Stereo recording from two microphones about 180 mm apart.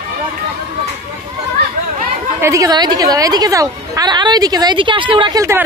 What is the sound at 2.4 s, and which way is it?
A woman's voice, 20° right (ahead or behind).